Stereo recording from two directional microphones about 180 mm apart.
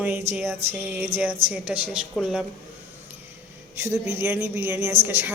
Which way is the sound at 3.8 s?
15° right (ahead or behind).